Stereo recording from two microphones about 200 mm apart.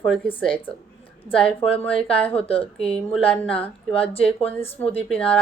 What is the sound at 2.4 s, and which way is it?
Speech, 30° left (ahead or behind).